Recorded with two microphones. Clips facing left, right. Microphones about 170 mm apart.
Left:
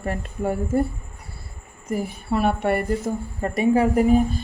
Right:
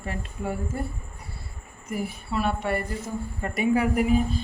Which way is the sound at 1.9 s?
55° left (ahead or behind).